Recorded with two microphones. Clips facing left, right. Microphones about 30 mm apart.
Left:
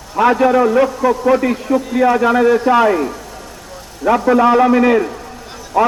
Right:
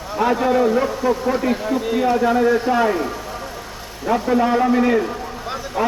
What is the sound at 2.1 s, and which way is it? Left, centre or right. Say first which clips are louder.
Speech: left 2 dB; left.